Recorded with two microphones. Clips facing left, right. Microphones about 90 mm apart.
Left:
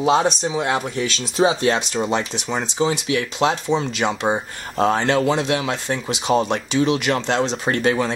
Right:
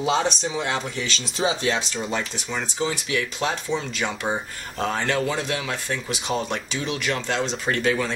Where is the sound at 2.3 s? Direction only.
25° left (ahead or behind).